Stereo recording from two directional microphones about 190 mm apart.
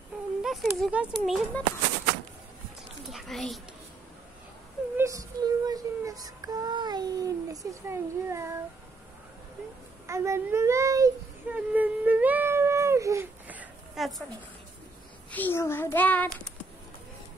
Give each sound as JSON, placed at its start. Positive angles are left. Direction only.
{"t": 0.4, "sound": "speech", "side_deg": 0}
{"t": 3.1, "sound": "speech", "side_deg": 0}
{"t": 4.9, "sound": "child singing", "side_deg": -15}
{"t": 10.0, "sound": "speech", "side_deg": -15}
{"t": 15.3, "sound": "a child's voice", "side_deg": 10}